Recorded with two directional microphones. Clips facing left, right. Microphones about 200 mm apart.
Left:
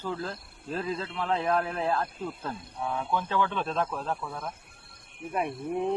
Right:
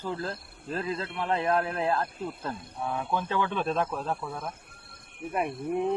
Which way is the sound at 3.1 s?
20° right (ahead or behind).